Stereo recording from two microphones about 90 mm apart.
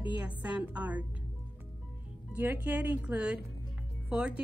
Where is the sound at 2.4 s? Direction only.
20° right (ahead or behind).